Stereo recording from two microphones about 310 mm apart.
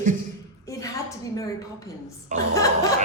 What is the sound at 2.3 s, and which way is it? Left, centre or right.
Speech, right.